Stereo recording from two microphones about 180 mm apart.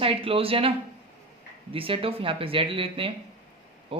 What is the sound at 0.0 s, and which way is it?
Speech, 30° right (ahead or behind).